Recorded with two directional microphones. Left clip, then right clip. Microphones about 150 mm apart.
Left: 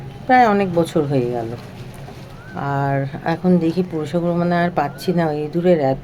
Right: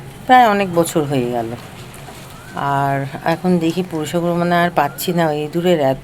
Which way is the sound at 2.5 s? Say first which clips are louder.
Right 4 dB; 5° left (ahead or behind).